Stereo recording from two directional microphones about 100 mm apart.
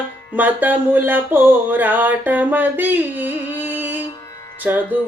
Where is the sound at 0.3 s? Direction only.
15° right (ahead or behind).